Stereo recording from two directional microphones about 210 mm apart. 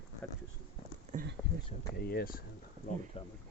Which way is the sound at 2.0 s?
50° left (ahead or behind).